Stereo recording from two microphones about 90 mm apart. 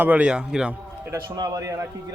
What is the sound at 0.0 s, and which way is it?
Speech, 15° right (ahead or behind).